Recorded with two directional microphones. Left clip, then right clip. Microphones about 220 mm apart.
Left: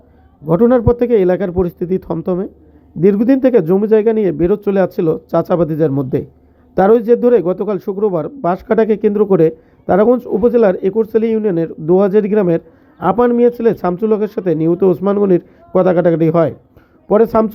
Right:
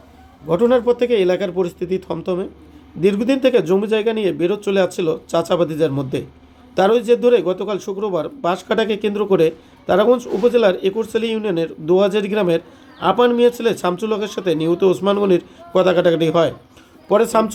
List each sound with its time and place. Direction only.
0.4 s a man's voice: 20° left (ahead or behind)